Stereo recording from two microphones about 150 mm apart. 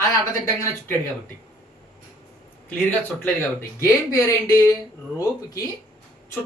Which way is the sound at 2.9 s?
15° left (ahead or behind).